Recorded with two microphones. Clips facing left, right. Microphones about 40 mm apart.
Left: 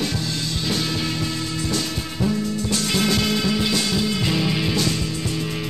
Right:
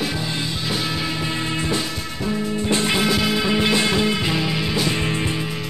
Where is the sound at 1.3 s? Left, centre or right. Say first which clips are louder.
Right 2 dB; right.